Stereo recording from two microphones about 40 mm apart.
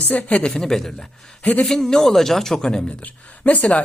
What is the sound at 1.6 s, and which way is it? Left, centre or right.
Speech, centre.